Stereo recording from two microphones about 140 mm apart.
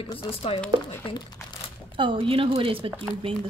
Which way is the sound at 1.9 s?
40° right (ahead or behind).